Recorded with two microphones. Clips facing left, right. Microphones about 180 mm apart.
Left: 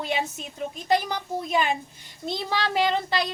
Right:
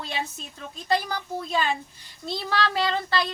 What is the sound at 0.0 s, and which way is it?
A woman's voice, 15° left (ahead or behind).